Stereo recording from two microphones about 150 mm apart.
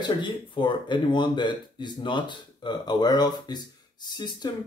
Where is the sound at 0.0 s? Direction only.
30° left (ahead or behind).